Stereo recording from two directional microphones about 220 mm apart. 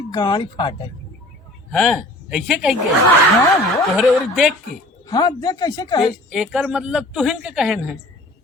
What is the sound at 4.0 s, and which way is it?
Speech, centre (ahead or behind).